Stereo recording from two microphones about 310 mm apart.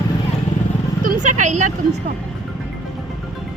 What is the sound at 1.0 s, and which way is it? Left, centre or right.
Speech, right.